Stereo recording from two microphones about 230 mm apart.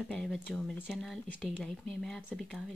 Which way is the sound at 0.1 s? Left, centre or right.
Centre.